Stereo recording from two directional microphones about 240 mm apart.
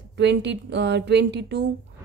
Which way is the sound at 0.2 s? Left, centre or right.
Right.